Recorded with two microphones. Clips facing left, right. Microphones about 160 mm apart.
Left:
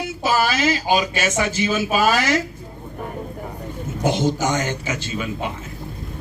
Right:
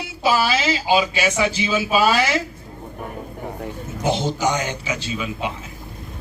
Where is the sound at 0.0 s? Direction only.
50° left (ahead or behind).